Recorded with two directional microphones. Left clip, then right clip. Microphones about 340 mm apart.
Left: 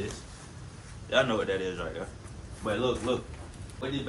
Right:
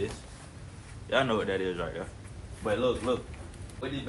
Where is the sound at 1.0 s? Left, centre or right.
Right.